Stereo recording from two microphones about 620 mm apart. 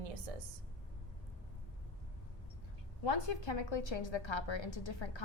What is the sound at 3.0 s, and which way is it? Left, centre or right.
A woman's voice, left.